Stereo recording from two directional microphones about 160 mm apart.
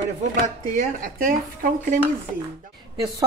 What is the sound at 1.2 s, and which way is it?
Speech, 60° right (ahead or behind).